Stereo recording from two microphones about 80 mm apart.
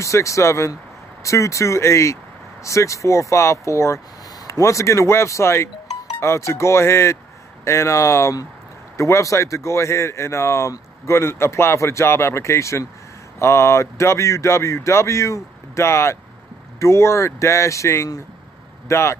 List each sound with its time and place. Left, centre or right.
0.0 s speech: left